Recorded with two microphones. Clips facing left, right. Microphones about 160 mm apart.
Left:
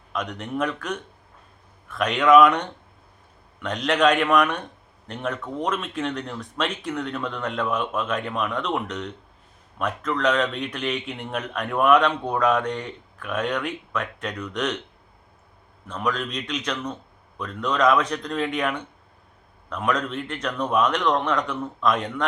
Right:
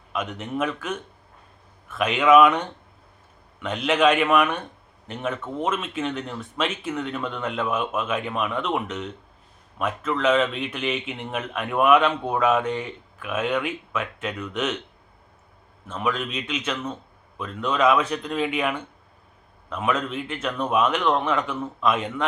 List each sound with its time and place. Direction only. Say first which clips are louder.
0.1 s a man's voice: even; 5° right (ahead or behind)
15.9 s a man's voice: even; 5° right (ahead or behind)